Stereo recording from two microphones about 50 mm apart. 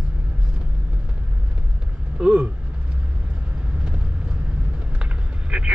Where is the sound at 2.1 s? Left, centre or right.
Right.